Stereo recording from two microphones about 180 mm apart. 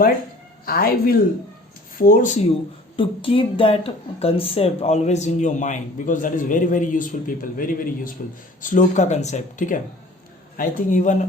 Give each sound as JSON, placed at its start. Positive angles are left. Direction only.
{"t": 0.6, "sound": "speech", "side_deg": 55}
{"t": 2.9, "sound": "speech", "side_deg": 30}